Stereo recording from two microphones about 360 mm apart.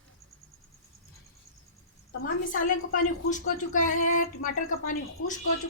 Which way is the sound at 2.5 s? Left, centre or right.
Left.